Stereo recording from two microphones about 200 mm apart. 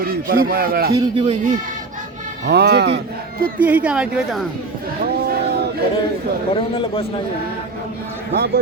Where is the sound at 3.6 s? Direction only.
5° right (ahead or behind).